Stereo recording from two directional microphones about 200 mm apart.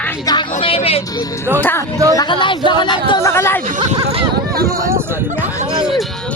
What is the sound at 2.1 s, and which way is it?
Speech, 25° left (ahead or behind).